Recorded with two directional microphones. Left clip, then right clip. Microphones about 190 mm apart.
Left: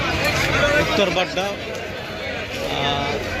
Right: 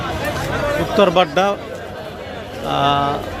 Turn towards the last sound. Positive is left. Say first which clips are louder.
# right 6 dB
turn(degrees=-40)  # may be behind; listen again after turning